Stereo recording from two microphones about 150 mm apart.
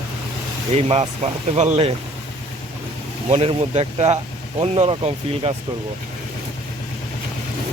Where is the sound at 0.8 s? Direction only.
45° right (ahead or behind).